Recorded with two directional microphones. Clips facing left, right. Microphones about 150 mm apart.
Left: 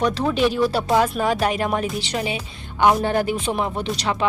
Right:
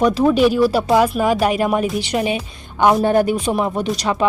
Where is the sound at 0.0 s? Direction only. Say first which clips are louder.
Right 6 dB; 10° right (ahead or behind).